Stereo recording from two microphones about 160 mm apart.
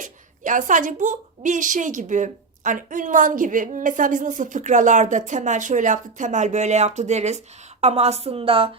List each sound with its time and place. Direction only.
0.0 s a woman's voice: 50° right (ahead or behind); by 8.7 s 35° right (ahead or behind)